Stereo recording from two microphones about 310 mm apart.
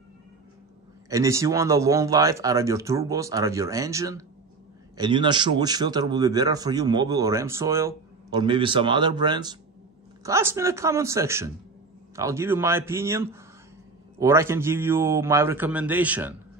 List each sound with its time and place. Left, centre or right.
1.1 s a man's voice: centre